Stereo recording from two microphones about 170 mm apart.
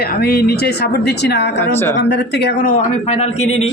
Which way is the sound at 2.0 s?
90° left.